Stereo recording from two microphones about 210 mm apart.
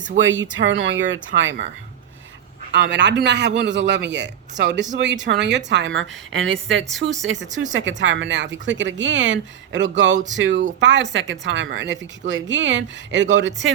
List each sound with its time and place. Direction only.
0.2 s speech: 65° right (ahead or behind)
2.7 s speech: 55° right (ahead or behind)